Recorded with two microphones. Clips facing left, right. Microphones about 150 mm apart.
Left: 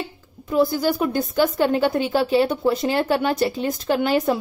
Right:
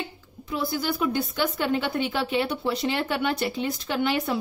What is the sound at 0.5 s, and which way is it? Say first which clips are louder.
A woman's voice: left 8 dB; 45° left (ahead or behind).